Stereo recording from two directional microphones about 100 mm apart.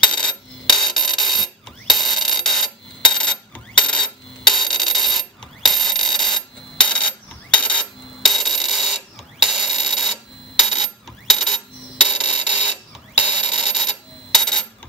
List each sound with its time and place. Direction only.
0.1 s coin: 5° left (ahead or behind)
12.0 s music: 50° right (ahead or behind)
12.3 s a sound: 10° right (ahead or behind)
13.2 s coin: 5° right (ahead or behind)